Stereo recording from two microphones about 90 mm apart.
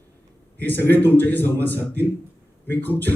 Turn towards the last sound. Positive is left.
turn(degrees=20)  # may be behind; listen again after turning